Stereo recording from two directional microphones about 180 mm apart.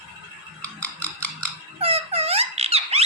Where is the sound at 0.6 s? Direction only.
10° left (ahead or behind).